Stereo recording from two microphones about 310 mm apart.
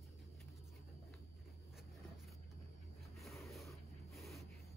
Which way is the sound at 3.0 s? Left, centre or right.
Centre.